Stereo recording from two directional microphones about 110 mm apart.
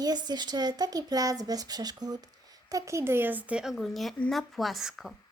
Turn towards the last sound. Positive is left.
turn(degrees=-5)  # may be behind; listen again after turning